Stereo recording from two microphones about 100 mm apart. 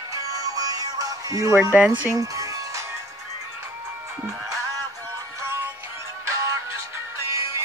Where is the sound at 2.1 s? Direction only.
35° right (ahead or behind).